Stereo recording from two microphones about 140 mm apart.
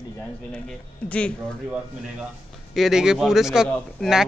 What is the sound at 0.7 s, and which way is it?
Speech, 10° left (ahead or behind).